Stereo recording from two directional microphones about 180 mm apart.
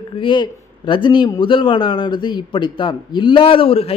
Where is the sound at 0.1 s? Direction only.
25° left (ahead or behind).